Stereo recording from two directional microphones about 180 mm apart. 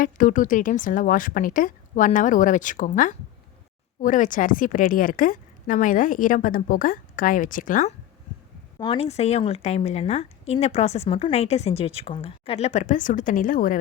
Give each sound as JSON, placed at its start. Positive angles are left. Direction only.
{"t": 0.0, "sound": "a woman's voice", "side_deg": 45}
{"t": 8.8, "sound": "a woman's voice", "side_deg": 30}